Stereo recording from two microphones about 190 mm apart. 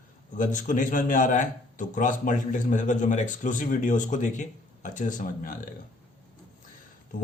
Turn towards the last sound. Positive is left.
turn(degrees=45)  # may be behind; listen again after turning